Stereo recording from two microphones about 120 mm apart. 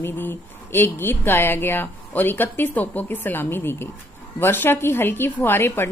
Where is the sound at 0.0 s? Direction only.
15° left (ahead or behind).